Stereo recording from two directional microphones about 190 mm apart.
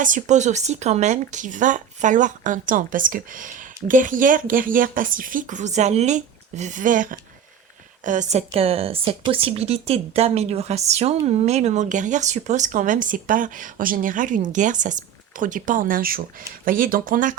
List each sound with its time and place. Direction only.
0.0 s speech: 40° right (ahead or behind)